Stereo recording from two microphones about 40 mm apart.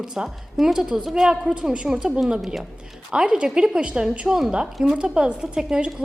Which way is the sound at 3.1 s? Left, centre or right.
Right.